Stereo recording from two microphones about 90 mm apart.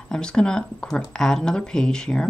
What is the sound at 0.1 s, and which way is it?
Speech, 10° left (ahead or behind).